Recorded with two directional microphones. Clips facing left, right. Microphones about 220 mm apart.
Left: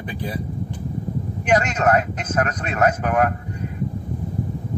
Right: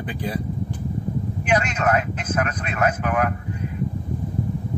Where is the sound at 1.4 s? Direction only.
40° left (ahead or behind).